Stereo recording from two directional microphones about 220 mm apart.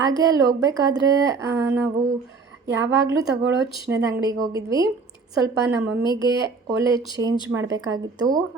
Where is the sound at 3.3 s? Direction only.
55° right (ahead or behind).